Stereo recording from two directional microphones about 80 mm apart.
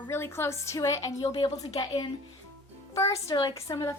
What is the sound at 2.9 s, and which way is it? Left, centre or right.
A woman's voice, left.